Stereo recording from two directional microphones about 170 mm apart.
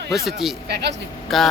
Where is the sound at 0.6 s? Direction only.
75° right (ahead or behind).